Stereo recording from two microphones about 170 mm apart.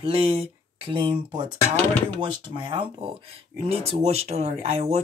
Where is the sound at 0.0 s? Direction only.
35° right (ahead or behind).